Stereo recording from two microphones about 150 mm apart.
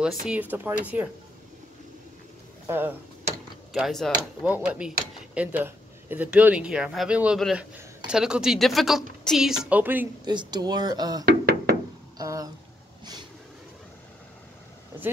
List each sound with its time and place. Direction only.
0.3 s speech: 10° right (ahead or behind)
3.7 s a woman's voice: centre (ahead or behind)
10.2 s speech: 30° right (ahead or behind)
11.2 s knock: 80° right
12.2 s a sound: 25° right (ahead or behind)